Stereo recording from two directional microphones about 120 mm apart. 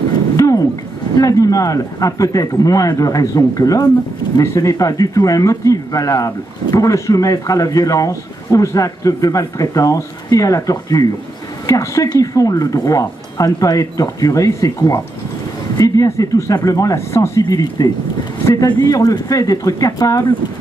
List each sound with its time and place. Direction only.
1.1 s a man's voice: 30° left (ahead or behind)